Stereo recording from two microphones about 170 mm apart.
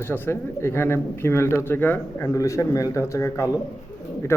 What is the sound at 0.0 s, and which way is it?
A man's voice, 15° left (ahead or behind).